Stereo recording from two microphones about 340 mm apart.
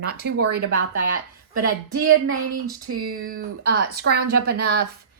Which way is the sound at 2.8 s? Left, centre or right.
Right.